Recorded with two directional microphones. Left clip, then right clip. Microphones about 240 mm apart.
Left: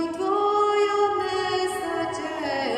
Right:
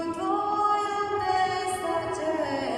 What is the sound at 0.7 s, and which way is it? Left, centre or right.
Music, left.